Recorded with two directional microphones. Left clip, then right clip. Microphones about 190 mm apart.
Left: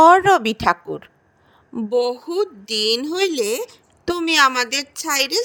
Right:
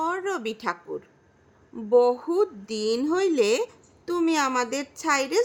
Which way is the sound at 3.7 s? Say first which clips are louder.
Left 6 dB; 45° left (ahead or behind).